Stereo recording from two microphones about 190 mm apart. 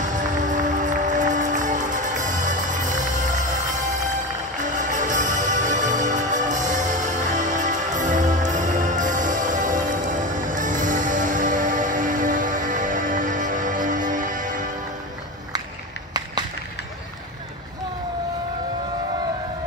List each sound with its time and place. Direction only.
0.0 s music: 40° right (ahead or behind)